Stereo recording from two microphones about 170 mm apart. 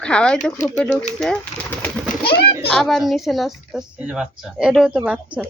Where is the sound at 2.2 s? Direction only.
65° left (ahead or behind).